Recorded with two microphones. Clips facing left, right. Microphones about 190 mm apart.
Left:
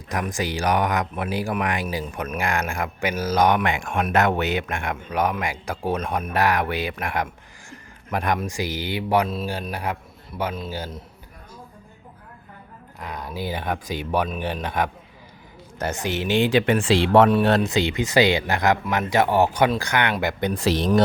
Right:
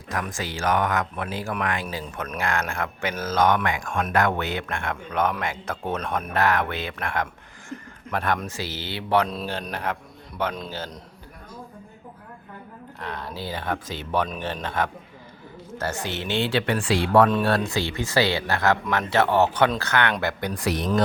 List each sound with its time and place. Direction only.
0.1 s speech: 15° left (ahead or behind)
13.0 s speech: 10° left (ahead or behind)